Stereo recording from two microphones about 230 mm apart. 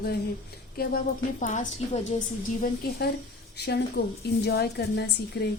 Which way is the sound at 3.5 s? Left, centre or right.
Left.